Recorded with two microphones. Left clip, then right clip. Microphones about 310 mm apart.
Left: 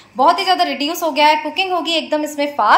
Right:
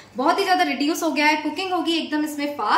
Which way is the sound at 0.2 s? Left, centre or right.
Centre.